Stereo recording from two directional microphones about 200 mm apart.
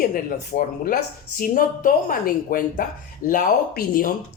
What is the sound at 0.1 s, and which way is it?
Speech, 45° left (ahead or behind).